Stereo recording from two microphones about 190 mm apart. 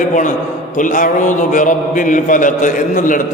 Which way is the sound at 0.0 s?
40° left (ahead or behind).